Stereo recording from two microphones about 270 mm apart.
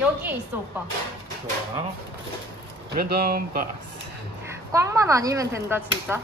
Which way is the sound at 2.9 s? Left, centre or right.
Right.